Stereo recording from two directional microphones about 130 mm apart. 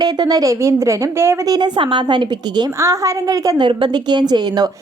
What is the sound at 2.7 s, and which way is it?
A woman's voice, 25° right (ahead or behind).